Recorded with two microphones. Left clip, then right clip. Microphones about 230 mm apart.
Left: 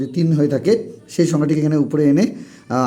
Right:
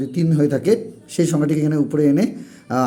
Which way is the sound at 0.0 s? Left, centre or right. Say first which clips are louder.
Left 1 dB; centre.